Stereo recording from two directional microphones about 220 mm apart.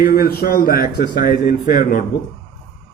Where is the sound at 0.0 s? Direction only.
45° left (ahead or behind).